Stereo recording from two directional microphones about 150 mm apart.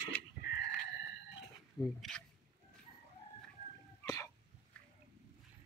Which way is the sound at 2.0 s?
5° left (ahead or behind).